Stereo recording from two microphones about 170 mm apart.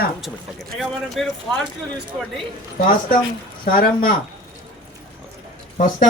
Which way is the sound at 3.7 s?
55° left (ahead or behind).